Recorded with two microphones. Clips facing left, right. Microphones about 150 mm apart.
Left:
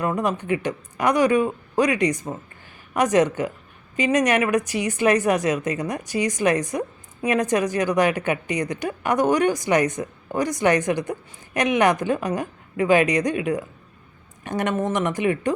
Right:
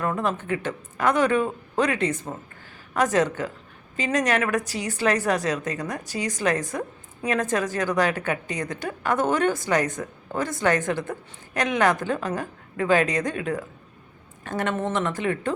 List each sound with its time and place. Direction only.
0.0 s a woman's voice: 15° left (ahead or behind)